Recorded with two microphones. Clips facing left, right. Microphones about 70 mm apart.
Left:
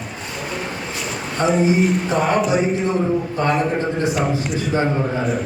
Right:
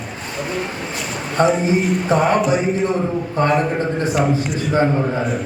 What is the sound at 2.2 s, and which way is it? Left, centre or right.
A man's voice, centre.